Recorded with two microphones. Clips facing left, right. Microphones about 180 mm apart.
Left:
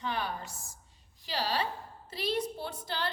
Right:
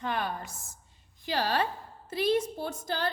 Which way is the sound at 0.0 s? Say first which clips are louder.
Right 3 dB; 50° right (ahead or behind).